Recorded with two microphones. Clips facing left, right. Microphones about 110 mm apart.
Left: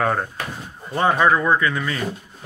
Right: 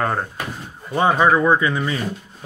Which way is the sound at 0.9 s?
15° right (ahead or behind).